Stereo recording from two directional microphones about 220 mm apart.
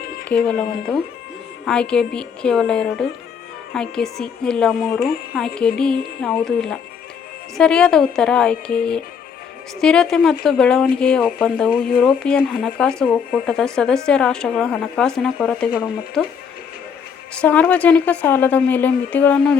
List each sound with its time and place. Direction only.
0.3 s speech: 5° left (ahead or behind)
1.6 s speech: 5° left (ahead or behind)
17.3 s a woman's voice: 5° left (ahead or behind)